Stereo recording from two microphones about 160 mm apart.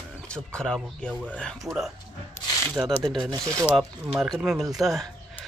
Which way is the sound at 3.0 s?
5° left (ahead or behind).